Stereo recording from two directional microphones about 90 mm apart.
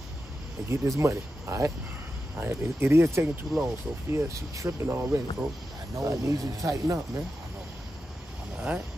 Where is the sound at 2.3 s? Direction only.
25° right (ahead or behind).